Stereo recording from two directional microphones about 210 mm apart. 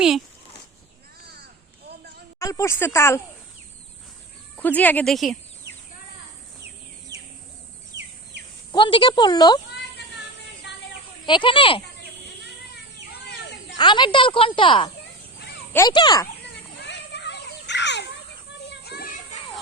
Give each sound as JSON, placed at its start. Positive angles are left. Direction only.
{"t": 1.2, "sound": "crow", "side_deg": -50}
{"t": 2.4, "sound": "speech", "side_deg": 15}
{"t": 4.5, "sound": "speech", "side_deg": 10}
{"t": 7.9, "sound": "insect", "side_deg": -55}
{"t": 8.7, "sound": "speech", "side_deg": 25}
{"t": 11.3, "sound": "speech", "side_deg": 25}
{"t": 13.1, "sound": "children playing", "side_deg": 50}
{"t": 13.7, "sound": "speech", "side_deg": 20}
{"t": 16.5, "sound": "children playing", "side_deg": 55}